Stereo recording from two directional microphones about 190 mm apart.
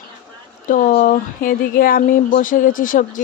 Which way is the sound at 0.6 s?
45° left (ahead or behind).